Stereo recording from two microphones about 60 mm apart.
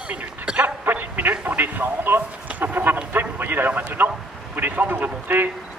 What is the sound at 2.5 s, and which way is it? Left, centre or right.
Chicken, right.